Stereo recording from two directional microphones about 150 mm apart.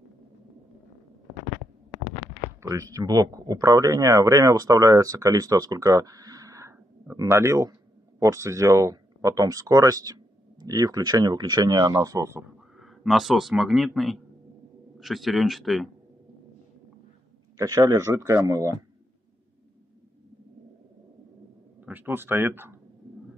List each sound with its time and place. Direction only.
2.6 s speech: 20° right (ahead or behind)
12.7 s speech: centre (ahead or behind)
17.6 s speech: 25° right (ahead or behind)
21.8 s speech: 15° right (ahead or behind)